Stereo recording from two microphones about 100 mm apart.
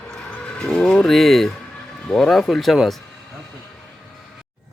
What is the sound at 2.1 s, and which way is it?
Speech, 5° left (ahead or behind).